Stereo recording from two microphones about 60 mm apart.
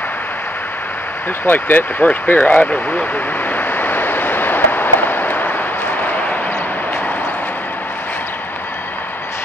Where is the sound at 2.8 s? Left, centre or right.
Left.